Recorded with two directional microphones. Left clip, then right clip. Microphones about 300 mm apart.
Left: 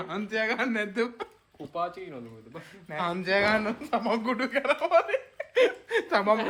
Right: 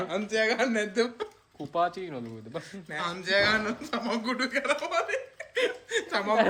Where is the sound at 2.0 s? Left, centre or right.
Right.